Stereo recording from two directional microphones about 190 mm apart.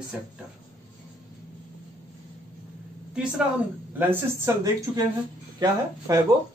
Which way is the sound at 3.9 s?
15° right (ahead or behind).